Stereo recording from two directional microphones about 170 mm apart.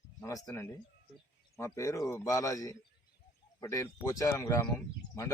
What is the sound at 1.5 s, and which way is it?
A man's voice, 15° left (ahead or behind).